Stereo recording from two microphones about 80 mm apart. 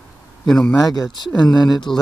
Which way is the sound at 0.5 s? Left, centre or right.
Centre.